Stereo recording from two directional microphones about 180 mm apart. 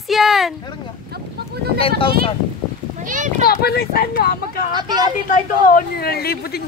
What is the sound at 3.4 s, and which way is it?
Speech, 60° left (ahead or behind).